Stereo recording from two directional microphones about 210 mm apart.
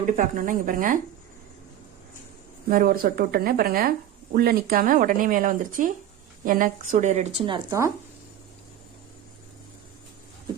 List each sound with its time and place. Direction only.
0.0 s speech: 40° right (ahead or behind)
2.6 s speech: 45° right (ahead or behind); by 7.9 s 15° right (ahead or behind)